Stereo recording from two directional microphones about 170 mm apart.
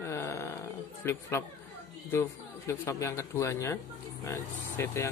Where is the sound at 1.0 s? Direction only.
15° left (ahead or behind).